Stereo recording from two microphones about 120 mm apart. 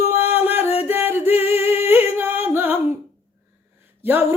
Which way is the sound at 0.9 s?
15° right (ahead or behind).